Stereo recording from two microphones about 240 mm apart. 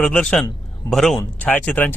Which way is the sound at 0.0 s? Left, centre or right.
Centre.